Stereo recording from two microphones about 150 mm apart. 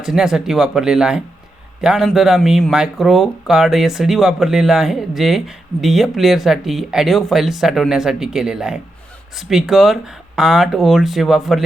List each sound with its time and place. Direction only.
0.0 s speech: 5° right (ahead or behind)